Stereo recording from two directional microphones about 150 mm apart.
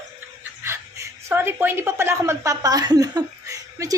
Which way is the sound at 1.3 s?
15° right (ahead or behind).